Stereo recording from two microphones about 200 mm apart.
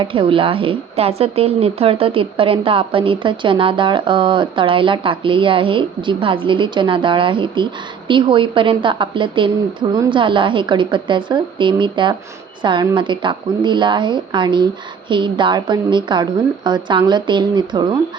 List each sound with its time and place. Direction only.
0.0 s speech: 25° right (ahead or behind)